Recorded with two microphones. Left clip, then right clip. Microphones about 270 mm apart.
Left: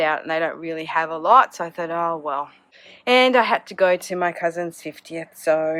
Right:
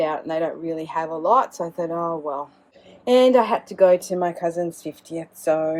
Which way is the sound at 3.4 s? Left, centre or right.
Centre.